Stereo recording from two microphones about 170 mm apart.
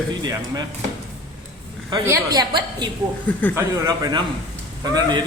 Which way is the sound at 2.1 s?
25° right (ahead or behind).